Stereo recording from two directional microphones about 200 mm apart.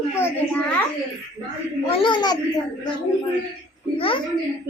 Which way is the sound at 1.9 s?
25° left (ahead or behind).